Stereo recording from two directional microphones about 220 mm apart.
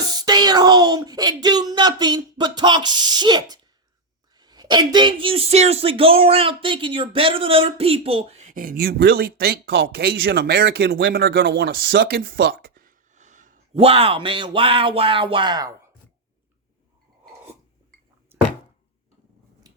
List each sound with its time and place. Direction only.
0.1 s speech: 20° right (ahead or behind); by 13.6 s 35° right (ahead or behind)
13.7 s speech: 25° right (ahead or behind)
18.3 s thunk: 10° right (ahead or behind)
19.6 s a sound: 15° right (ahead or behind)